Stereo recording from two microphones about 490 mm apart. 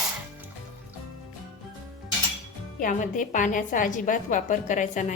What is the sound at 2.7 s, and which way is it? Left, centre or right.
A woman's voice, centre.